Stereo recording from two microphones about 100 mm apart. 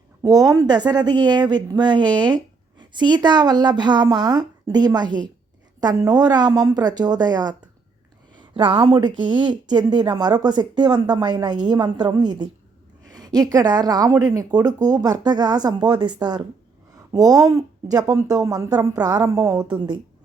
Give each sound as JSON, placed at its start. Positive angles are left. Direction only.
{"t": 0.2, "sound": "a woman's voice", "side_deg": -40}
{"t": 19.6, "sound": "speech", "side_deg": -45}